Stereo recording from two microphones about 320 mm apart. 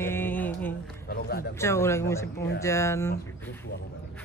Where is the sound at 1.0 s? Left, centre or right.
Left.